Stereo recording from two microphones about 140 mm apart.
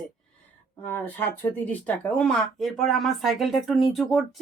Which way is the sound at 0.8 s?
15° left (ahead or behind).